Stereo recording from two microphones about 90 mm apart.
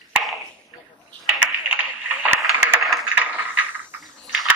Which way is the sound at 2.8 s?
Centre (ahead or behind).